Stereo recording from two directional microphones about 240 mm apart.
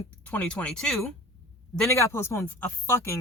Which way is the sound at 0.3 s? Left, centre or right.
Centre.